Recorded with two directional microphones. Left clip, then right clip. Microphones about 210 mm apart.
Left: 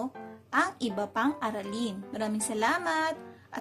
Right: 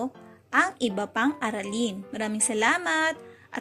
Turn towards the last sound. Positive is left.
turn(degrees=-15)  # may be behind; listen again after turning